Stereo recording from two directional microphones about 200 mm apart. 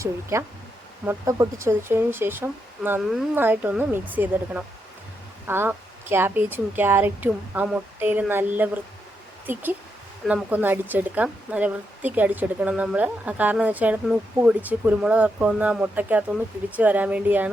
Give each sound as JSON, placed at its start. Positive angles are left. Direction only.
{"t": 0.0, "sound": "a woman's voice", "side_deg": -15}